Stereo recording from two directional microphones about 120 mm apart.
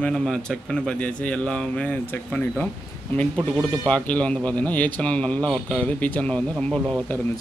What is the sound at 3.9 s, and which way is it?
Speech, 10° left (ahead or behind).